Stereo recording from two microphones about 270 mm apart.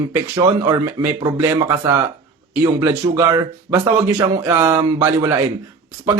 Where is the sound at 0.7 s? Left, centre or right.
Centre.